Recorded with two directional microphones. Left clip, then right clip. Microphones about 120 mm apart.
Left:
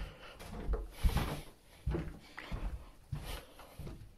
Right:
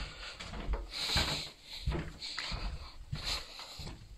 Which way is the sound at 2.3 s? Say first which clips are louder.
Right 8 dB; 35° left (ahead or behind).